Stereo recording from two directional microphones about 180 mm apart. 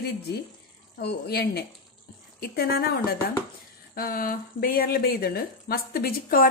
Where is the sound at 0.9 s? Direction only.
65° left (ahead or behind).